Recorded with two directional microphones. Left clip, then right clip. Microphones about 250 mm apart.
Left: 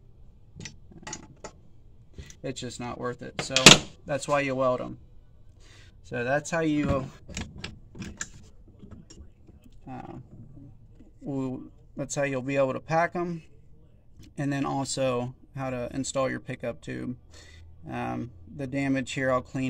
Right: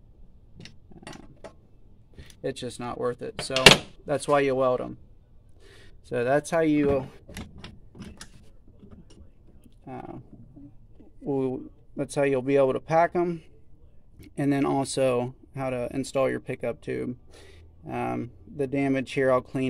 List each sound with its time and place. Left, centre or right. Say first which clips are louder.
2.1 s speech: right 4 dB; right
9.8 s a sound: right 2 dB; right
11.2 s speech: right 6 dB; right